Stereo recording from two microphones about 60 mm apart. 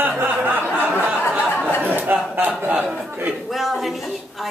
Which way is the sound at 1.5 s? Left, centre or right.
Left.